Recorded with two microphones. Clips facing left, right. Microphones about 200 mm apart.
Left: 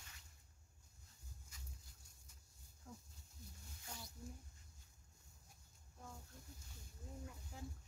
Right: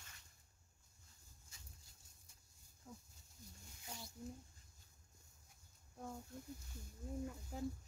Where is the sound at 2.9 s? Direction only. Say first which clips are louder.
Even; 5° right (ahead or behind).